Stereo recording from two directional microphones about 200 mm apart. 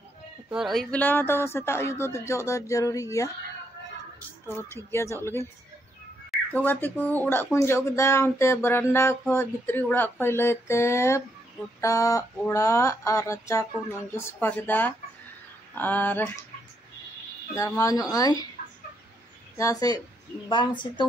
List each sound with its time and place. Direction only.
0.5 s speech: centre (ahead or behind); by 3.3 s 15° left (ahead or behind)
4.7 s speech: 15° left (ahead or behind)
17.6 s speech: 15° left (ahead or behind)
19.5 s speech: 15° left (ahead or behind)